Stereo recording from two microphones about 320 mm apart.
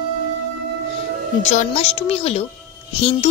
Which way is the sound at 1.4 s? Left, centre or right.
Left.